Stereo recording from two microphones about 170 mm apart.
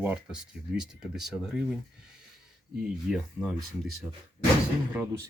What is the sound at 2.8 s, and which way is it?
Speech, 5° right (ahead or behind).